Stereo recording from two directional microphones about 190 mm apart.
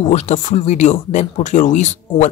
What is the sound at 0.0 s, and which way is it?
Speech, 35° left (ahead or behind).